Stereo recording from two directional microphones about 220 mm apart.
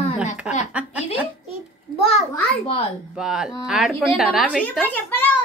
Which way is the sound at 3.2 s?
Centre (ahead or behind).